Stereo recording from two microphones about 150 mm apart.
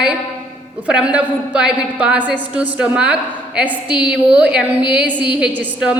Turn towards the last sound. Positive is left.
turn(degrees=-10)  # may be behind; listen again after turning